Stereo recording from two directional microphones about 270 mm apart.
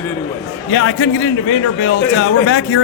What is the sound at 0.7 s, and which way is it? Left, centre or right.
Speech, left.